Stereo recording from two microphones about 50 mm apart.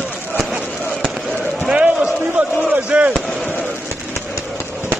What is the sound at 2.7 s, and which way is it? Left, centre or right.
Chop, right.